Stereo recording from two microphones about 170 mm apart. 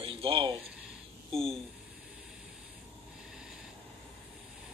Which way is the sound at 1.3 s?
5° left (ahead or behind).